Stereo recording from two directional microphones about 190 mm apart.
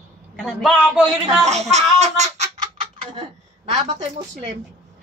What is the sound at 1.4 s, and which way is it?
A child's voice, 35° right (ahead or behind).